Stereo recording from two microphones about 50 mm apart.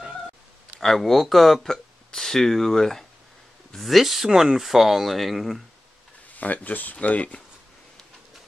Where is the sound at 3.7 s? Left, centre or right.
Centre.